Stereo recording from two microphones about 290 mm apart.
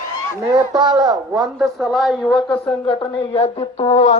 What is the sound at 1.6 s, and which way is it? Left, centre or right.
Speech, centre.